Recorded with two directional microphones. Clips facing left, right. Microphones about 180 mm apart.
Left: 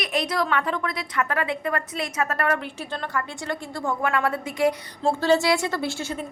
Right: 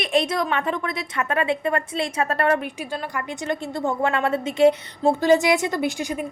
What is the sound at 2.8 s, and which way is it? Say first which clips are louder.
A woman's voice: right 1 dB; 10° right (ahead or behind).